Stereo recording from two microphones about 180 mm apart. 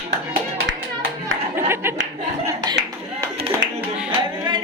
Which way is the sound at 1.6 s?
15° right (ahead or behind).